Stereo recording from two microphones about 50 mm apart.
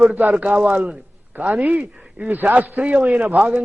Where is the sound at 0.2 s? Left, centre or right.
Right.